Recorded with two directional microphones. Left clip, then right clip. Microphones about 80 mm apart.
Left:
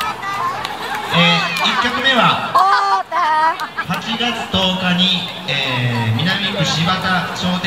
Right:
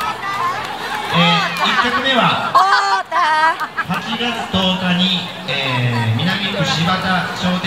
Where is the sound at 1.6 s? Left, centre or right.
Right.